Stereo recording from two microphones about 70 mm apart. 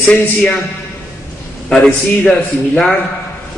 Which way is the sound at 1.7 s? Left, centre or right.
Centre.